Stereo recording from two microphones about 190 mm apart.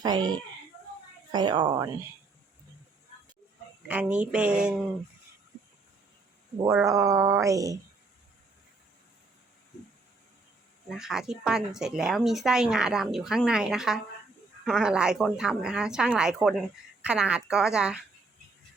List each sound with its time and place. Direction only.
0.0 s speech: 20° right (ahead or behind)
3.8 s a woman's voice: 5° right (ahead or behind)
6.8 s speech: 15° right (ahead or behind)
10.8 s a woman's voice: centre (ahead or behind)